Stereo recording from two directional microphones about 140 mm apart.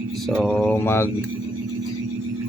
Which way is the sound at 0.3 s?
5° left (ahead or behind).